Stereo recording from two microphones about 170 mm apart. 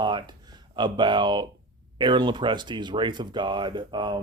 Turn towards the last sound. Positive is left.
turn(degrees=-25)  # may be behind; listen again after turning